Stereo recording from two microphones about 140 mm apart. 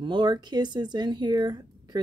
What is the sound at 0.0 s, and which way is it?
Speech, 35° right (ahead or behind).